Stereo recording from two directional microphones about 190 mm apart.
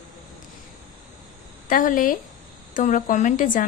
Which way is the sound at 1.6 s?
45° left (ahead or behind).